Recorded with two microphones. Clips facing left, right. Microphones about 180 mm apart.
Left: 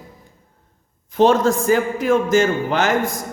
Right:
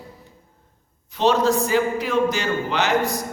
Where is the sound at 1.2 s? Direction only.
50° left (ahead or behind).